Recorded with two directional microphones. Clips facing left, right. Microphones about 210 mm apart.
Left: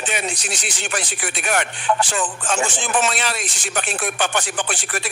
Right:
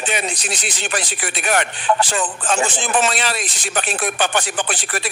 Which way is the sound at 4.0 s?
35° right (ahead or behind).